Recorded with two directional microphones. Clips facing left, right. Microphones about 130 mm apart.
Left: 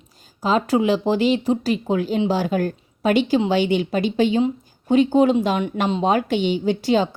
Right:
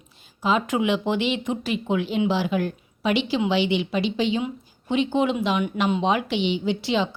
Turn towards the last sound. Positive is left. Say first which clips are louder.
# left 5 dB
turn(degrees=45)  # may be behind; listen again after turning